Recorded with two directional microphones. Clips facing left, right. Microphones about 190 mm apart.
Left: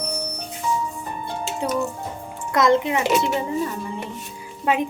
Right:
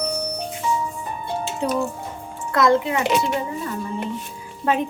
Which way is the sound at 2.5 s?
20° left (ahead or behind).